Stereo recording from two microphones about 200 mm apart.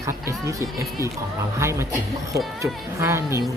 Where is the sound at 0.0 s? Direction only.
15° right (ahead or behind).